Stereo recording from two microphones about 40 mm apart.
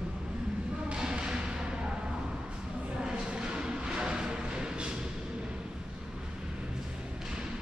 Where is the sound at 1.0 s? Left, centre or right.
Right.